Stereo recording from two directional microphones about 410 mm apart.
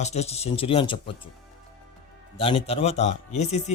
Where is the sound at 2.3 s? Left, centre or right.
Centre.